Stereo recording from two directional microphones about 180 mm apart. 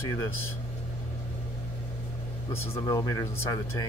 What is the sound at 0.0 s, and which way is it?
Speech, 15° left (ahead or behind).